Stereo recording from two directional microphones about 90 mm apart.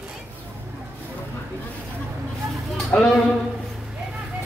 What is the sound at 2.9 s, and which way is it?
Speech, 15° left (ahead or behind).